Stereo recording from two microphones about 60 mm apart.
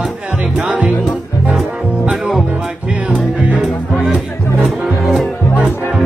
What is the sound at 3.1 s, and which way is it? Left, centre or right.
Music, right.